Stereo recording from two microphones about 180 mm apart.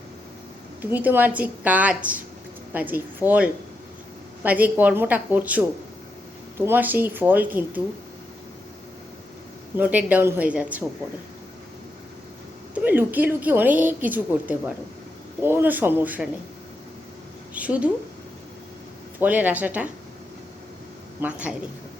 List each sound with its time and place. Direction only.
0.8 s a woman's voice: 10° right (ahead or behind)
9.7 s a woman's voice: 10° right (ahead or behind)
12.7 s a woman's voice: 10° right (ahead or behind)
17.5 s a woman's voice: 5° right (ahead or behind)
19.2 s a woman's voice: 10° right (ahead or behind)
21.2 s a woman's voice: 5° right (ahead or behind)